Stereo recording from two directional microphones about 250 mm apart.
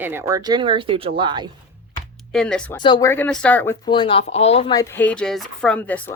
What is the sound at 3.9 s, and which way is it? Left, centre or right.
Speech, centre.